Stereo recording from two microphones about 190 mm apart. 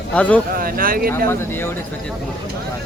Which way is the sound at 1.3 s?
10° left (ahead or behind).